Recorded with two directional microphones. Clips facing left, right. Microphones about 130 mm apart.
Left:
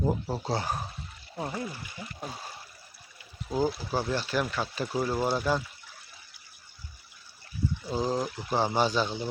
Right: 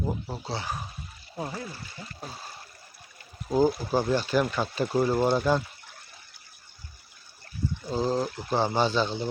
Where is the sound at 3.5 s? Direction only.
45° right (ahead or behind).